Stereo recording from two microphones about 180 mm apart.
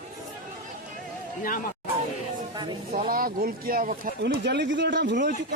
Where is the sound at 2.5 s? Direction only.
25° right (ahead or behind).